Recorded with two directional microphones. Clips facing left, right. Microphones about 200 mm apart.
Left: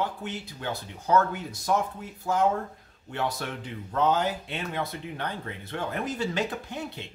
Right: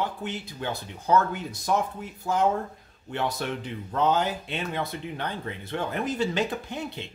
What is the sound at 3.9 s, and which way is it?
Speech, 20° right (ahead or behind).